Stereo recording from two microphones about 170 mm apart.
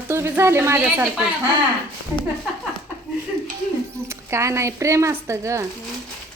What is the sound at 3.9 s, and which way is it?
Speech, 15° right (ahead or behind).